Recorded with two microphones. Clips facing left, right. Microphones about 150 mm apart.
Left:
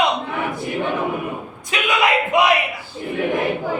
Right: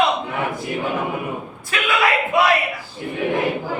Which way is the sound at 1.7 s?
20° left (ahead or behind).